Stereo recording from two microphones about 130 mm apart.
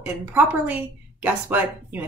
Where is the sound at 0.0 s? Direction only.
15° right (ahead or behind).